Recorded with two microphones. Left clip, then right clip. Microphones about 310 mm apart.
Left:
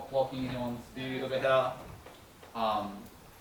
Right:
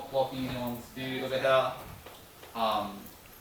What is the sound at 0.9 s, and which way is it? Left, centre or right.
Speech, centre.